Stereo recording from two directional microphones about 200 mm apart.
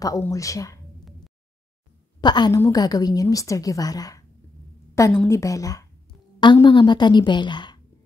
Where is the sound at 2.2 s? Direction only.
20° left (ahead or behind).